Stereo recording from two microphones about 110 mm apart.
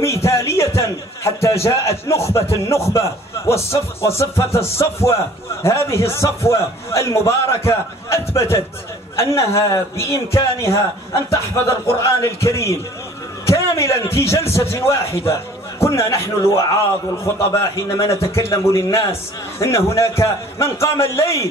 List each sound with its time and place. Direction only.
0.0 s a sound: 25° left (ahead or behind)
2.5 s a man's voice: 25° left (ahead or behind)
15.8 s a man's voice: 25° left (ahead or behind)